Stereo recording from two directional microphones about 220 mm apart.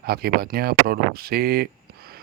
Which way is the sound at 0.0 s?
45° right (ahead or behind).